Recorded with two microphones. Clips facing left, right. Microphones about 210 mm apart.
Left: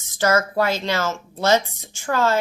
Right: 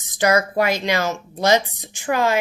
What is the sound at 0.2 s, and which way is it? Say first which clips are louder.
A woman's voice: right 1 dB; 15° right (ahead or behind).